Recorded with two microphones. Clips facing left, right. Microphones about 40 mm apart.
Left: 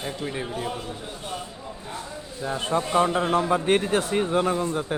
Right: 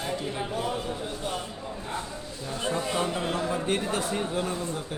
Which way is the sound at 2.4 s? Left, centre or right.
Left.